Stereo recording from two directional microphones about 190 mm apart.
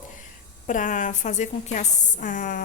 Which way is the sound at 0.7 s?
40° left (ahead or behind).